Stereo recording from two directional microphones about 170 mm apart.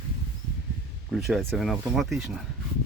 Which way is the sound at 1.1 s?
Centre (ahead or behind).